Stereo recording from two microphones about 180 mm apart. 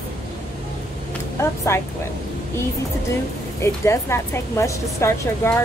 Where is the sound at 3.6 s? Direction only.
15° left (ahead or behind).